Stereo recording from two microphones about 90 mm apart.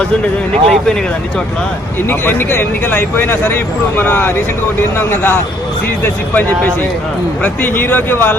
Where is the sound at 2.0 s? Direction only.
25° left (ahead or behind).